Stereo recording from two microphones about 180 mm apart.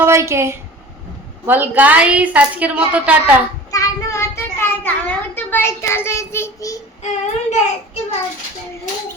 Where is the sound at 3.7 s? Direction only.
15° left (ahead or behind).